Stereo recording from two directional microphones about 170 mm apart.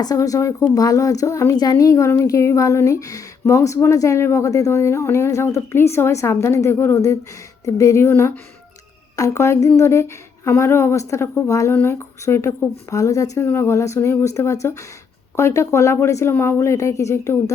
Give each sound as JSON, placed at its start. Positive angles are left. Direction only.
{"t": 0.0, "sound": "speech", "side_deg": 20}